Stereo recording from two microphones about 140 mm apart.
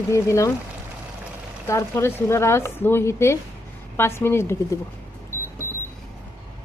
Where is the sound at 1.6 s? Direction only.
20° left (ahead or behind).